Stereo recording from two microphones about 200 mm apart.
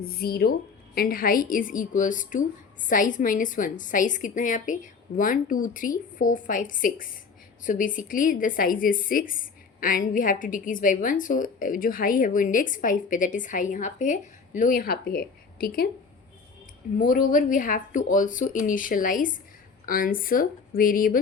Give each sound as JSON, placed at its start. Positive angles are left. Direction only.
{"t": 0.0, "sound": "a woman's voice", "side_deg": 50}
{"t": 17.0, "sound": "a woman's voice", "side_deg": 45}